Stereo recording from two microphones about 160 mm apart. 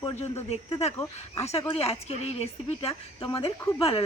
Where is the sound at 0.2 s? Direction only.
40° left (ahead or behind).